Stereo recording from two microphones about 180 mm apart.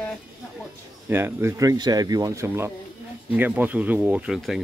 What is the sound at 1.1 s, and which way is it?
Speech, 15° right (ahead or behind).